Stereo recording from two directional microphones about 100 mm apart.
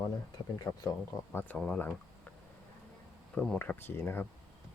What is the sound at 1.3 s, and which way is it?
Speech, 20° left (ahead or behind).